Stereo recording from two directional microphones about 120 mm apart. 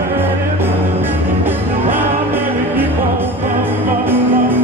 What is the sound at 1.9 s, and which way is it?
Music, 15° right (ahead or behind).